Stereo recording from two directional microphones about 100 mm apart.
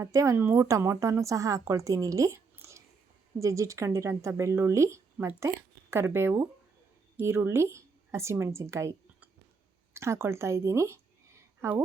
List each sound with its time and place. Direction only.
0.0 s a woman's voice: 35° right (ahead or behind)